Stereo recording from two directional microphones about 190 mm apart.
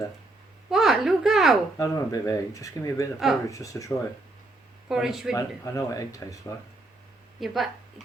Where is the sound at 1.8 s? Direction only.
20° left (ahead or behind).